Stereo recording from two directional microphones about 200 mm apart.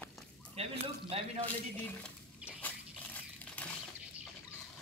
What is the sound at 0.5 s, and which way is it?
Speech, 30° right (ahead or behind).